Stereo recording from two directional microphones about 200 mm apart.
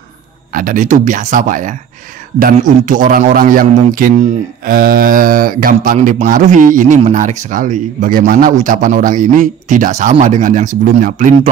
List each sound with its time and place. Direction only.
0.5 s a man's voice: 45° right (ahead or behind)